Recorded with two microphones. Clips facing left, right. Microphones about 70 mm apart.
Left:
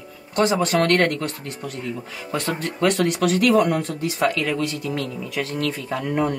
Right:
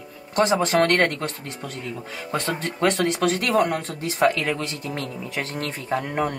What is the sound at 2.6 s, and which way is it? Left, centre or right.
Speech, right.